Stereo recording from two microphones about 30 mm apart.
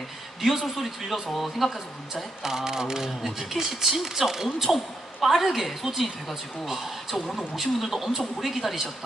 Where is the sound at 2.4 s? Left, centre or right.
Centre.